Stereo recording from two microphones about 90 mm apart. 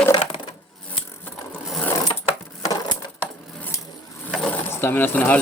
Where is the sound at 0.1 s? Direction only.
70° left (ahead or behind).